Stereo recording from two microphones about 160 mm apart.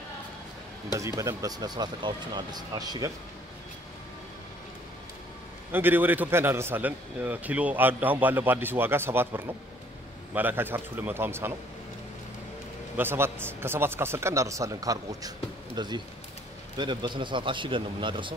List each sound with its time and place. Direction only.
0.9 s speech: 20° right (ahead or behind)
5.7 s a man's voice: 10° right (ahead or behind)
12.9 s a man's voice: 15° right (ahead or behind); by 18.3 s 30° right (ahead or behind)